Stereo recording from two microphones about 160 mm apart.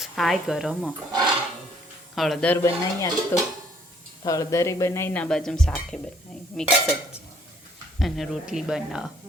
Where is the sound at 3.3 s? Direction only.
15° left (ahead or behind).